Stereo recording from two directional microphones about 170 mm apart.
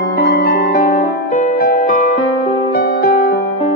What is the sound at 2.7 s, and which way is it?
Music, 65° left (ahead or behind).